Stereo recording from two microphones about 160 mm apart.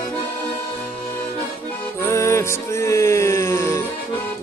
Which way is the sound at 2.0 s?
20° left (ahead or behind).